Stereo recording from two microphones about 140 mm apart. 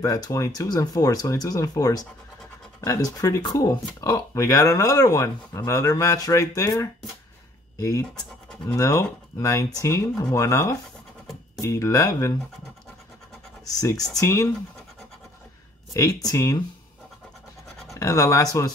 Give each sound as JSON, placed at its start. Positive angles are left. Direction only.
{"t": 0.0, "sound": "speech", "side_deg": 25}
{"t": 8.2, "sound": "speech", "side_deg": 5}
{"t": 8.7, "sound": "speech", "side_deg": 25}
{"t": 13.7, "sound": "speech", "side_deg": 25}
{"t": 15.9, "sound": "speech", "side_deg": 25}
{"t": 17.9, "sound": "speech", "side_deg": 20}